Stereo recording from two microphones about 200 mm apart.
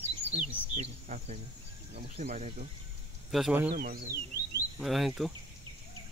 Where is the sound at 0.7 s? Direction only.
35° right (ahead or behind).